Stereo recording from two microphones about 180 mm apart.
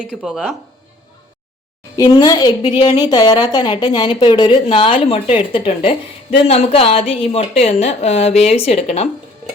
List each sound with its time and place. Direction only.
0.1 s speech: centre (ahead or behind)
2.0 s a woman's voice: 20° left (ahead or behind)